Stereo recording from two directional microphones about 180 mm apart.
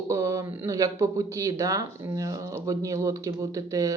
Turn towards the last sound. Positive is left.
turn(degrees=-20)  # may be behind; listen again after turning